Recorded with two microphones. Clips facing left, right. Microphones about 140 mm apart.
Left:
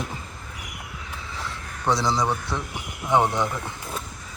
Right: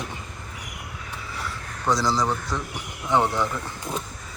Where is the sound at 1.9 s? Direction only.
15° left (ahead or behind).